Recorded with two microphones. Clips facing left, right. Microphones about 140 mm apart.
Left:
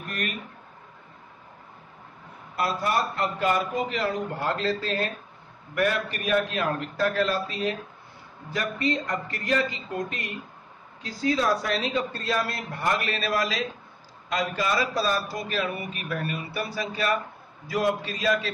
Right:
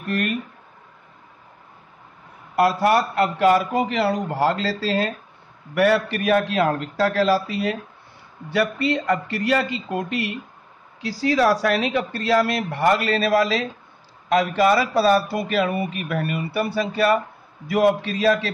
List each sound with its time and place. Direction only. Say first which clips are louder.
2.5 s a man's voice: right 8 dB; 70° right (ahead or behind)
11.0 s a man's voice: right 6 dB; 90° right; by 18.5 s 65° right (ahead or behind)